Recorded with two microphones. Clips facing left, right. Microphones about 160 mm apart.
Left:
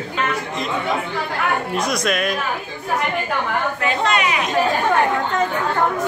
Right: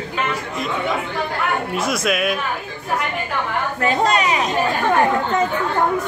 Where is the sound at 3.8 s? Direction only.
40° right (ahead or behind).